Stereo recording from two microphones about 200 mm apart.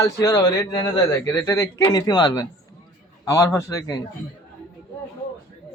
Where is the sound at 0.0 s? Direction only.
20° left (ahead or behind).